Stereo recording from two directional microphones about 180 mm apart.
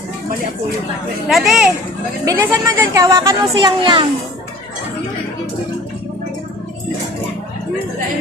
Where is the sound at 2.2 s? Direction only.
15° right (ahead or behind).